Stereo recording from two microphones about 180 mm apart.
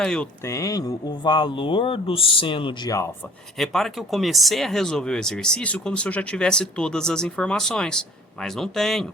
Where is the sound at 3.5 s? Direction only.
Centre (ahead or behind).